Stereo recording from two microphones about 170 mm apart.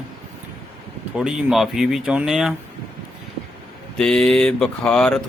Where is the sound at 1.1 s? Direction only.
5° right (ahead or behind).